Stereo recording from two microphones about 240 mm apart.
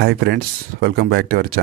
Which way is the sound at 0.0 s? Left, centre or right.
Right.